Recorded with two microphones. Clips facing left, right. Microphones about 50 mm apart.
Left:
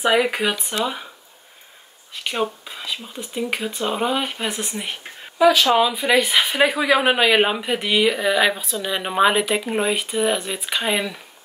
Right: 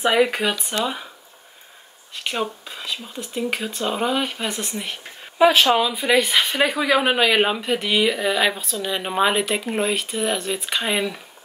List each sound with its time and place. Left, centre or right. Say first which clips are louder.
0.0 s speech: even; centre
2.7 s speech: even; centre
5.4 s speech: even; right
5.8 s speech: left 1 dB; centre